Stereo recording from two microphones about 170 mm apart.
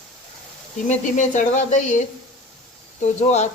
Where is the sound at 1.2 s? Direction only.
45° left (ahead or behind).